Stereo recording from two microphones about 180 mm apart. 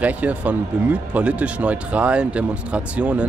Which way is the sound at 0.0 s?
10° right (ahead or behind).